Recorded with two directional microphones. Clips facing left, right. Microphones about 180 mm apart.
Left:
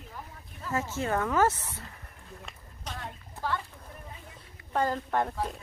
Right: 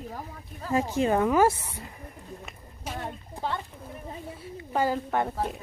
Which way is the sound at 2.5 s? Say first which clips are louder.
Right 2 dB; 5° right (ahead or behind).